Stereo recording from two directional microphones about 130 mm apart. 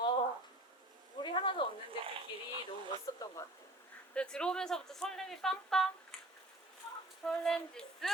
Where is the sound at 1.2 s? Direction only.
40° left (ahead or behind).